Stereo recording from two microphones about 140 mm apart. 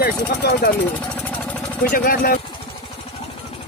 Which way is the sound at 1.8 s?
90° left.